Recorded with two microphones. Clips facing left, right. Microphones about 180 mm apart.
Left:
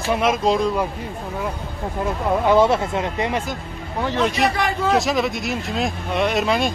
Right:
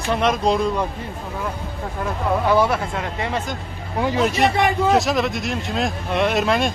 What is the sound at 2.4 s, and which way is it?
Speech, 20° left (ahead or behind).